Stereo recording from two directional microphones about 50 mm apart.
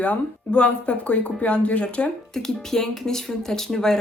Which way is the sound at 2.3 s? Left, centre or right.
Centre.